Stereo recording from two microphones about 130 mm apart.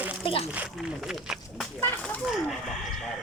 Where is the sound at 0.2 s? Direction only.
40° left (ahead or behind).